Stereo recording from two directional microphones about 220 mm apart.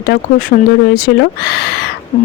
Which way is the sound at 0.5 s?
45° left (ahead or behind).